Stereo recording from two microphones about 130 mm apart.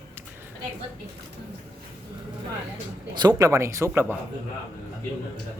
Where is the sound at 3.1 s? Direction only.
30° right (ahead or behind).